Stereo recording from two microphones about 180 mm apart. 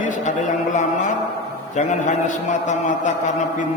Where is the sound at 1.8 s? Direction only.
40° left (ahead or behind).